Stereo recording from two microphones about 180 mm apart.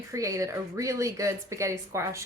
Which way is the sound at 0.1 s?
15° right (ahead or behind).